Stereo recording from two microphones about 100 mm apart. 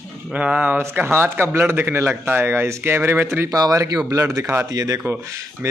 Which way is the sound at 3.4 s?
35° right (ahead or behind).